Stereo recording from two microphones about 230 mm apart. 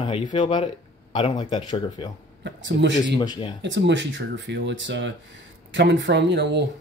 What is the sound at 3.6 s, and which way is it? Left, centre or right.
Speech, right.